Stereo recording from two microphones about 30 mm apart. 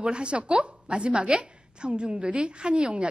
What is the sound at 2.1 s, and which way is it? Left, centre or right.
Speech, right.